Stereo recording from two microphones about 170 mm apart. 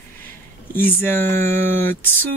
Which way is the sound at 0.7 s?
10° left (ahead or behind).